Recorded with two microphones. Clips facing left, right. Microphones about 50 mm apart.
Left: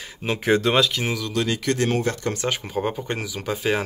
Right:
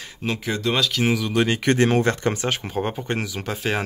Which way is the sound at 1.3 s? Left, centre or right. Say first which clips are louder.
Right 3 dB; right.